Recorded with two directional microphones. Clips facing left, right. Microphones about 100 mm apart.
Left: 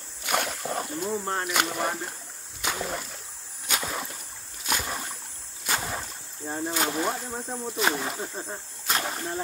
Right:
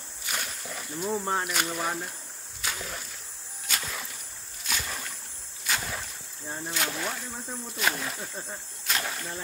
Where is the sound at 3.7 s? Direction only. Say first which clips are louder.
Left 5 dB; 60° left (ahead or behind).